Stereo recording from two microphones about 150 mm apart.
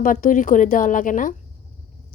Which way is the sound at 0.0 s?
60° left (ahead or behind).